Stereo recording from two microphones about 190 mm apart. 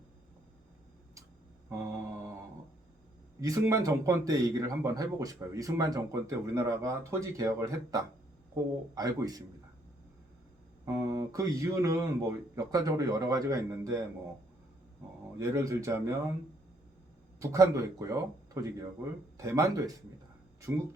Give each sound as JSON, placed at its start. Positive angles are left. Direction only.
{"t": 1.7, "sound": "mantra", "side_deg": -15}
{"t": 3.4, "sound": "speech", "side_deg": -15}
{"t": 10.8, "sound": "speech", "side_deg": -15}
{"t": 15.4, "sound": "speech", "side_deg": -15}
{"t": 17.4, "sound": "speech", "side_deg": -15}